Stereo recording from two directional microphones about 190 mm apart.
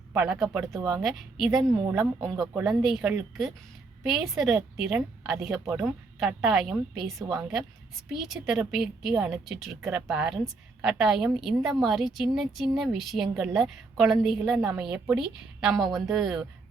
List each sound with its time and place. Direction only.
0.1 s a woman's voice: 5° right (ahead or behind)
0.8 s a woman's voice: 20° right (ahead or behind)
1.0 s a woman's voice: centre (ahead or behind)
1.6 s a woman's voice: 15° right (ahead or behind)
2.5 s a woman's voice: 5° right (ahead or behind)